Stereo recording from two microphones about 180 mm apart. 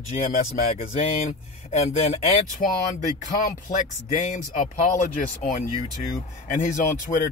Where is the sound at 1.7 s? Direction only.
40° left (ahead or behind).